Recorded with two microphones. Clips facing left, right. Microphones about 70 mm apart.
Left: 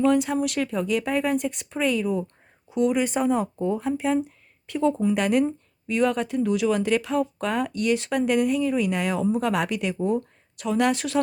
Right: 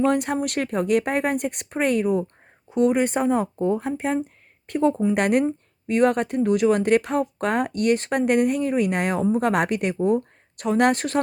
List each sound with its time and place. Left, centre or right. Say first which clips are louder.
0.0 s speech: even; right